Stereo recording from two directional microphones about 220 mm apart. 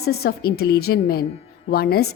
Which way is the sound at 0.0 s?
45° left (ahead or behind).